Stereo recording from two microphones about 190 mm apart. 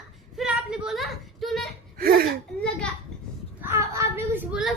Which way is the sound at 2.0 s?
50° right (ahead or behind).